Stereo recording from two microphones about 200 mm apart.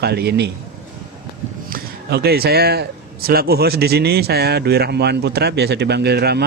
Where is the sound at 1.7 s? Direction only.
55° right (ahead or behind).